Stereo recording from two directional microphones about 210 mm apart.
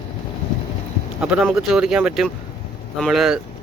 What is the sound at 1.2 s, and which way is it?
Speech, 5° right (ahead or behind).